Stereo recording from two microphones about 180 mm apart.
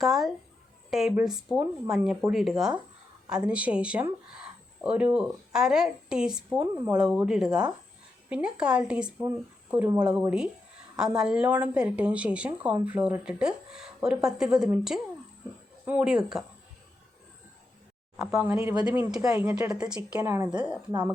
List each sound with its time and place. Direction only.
0.0 s speech: centre (ahead or behind)
18.2 s speech: 5° right (ahead or behind)
18.5 s speech: 20° right (ahead or behind)
18.9 s speech: 5° right (ahead or behind)